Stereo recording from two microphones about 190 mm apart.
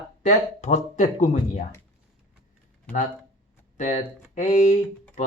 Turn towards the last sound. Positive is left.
turn(degrees=35)  # may be behind; listen again after turning